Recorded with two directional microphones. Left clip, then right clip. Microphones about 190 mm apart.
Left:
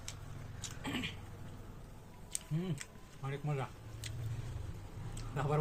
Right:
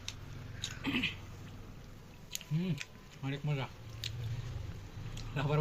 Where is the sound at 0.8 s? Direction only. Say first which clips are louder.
Right 5 dB; 15° left (ahead or behind).